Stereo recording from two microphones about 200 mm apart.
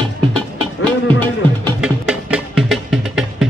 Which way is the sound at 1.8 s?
5° right (ahead or behind).